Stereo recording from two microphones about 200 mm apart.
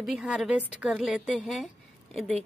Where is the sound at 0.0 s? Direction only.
Centre (ahead or behind).